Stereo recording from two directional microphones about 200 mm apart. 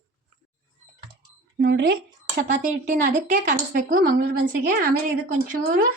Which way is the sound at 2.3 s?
45° right (ahead or behind).